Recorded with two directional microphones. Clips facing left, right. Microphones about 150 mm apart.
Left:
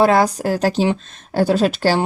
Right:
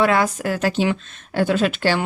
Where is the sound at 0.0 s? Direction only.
35° left (ahead or behind).